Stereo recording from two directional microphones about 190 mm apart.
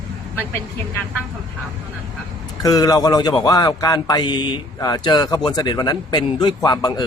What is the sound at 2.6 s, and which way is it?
A man's voice, 20° left (ahead or behind).